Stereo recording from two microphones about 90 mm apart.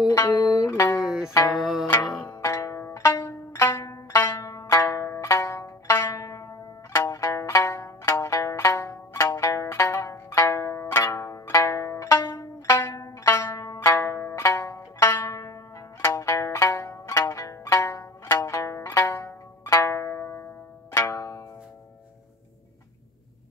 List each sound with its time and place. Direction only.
0.0 s music: 45° left (ahead or behind)
0.7 s music: 35° left (ahead or behind)
1.0 s music: 10° right (ahead or behind)
1.3 s music: 40° left (ahead or behind)
1.6 s music: 5° right (ahead or behind)
2.2 s music: 30° left (ahead or behind)
4.3 s zither: 35° left (ahead or behind)